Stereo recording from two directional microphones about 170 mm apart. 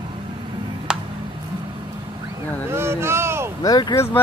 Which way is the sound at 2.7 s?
15° right (ahead or behind).